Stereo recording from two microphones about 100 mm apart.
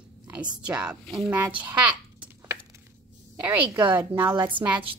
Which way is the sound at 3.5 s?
20° right (ahead or behind).